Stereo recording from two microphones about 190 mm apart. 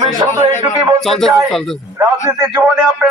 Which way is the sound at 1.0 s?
Centre (ahead or behind).